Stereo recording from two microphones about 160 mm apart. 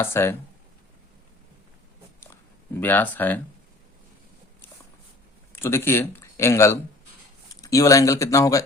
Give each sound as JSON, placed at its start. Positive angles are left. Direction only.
{"t": 0.0, "sound": "speech", "side_deg": 15}
{"t": 2.8, "sound": "speech", "side_deg": 10}
{"t": 5.5, "sound": "speech", "side_deg": 15}